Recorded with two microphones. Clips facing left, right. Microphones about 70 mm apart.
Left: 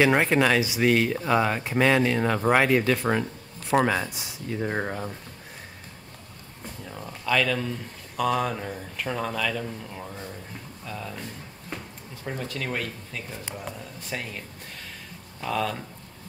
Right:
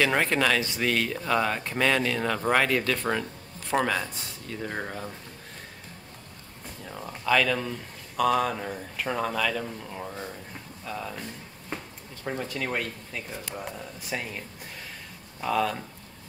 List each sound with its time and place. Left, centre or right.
0.0 s speech: centre
6.9 s speech: centre
12.3 s speech: centre
15.4 s speech: centre